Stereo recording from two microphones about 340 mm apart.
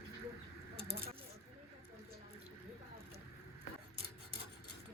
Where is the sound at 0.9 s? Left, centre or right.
Right.